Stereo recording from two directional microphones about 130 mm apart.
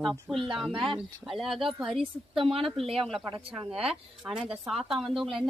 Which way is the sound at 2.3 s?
45° right (ahead or behind).